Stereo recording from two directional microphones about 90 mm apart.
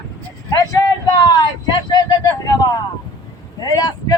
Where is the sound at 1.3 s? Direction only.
50° left (ahead or behind).